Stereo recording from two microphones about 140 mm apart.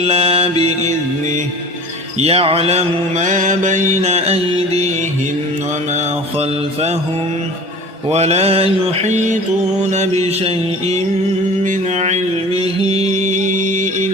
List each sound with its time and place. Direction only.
0.0 s mantra: 45° right (ahead or behind)
0.6 s music: 55° right (ahead or behind)
2.1 s mantra: 45° right (ahead or behind)
8.1 s mantra: 50° right (ahead or behind)
12.9 s music: 50° right (ahead or behind)
13.2 s music: 60° right (ahead or behind)